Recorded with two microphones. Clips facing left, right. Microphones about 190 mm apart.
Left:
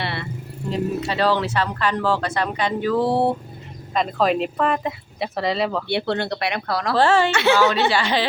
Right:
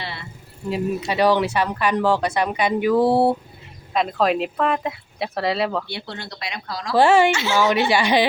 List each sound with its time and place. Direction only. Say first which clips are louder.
0.0 s vehicle: left 5 dB; 65° left (ahead or behind)
0.7 s speech: even; 15° right (ahead or behind)
5.9 s speech: left 11 dB; 65° left (ahead or behind)
6.9 s speech: right 3 dB; 15° right (ahead or behind)
7.3 s speech: left 3 dB; 65° left (ahead or behind)
7.9 s speech: right 3 dB; 15° right (ahead or behind)